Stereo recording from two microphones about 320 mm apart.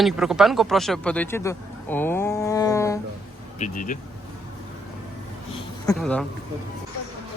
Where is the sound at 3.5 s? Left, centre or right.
Left.